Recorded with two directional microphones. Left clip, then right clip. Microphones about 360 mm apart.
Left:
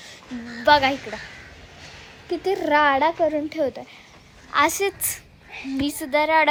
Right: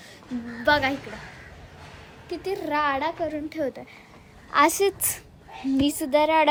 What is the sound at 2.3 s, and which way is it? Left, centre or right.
A woman's voice, centre.